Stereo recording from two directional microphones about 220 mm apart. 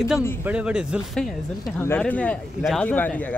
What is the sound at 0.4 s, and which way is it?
Speech, 5° right (ahead or behind).